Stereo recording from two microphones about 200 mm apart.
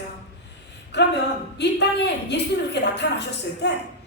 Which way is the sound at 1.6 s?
60° left (ahead or behind).